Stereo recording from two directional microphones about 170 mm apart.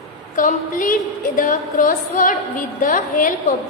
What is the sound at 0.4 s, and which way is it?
A woman's voice, 50° left (ahead or behind).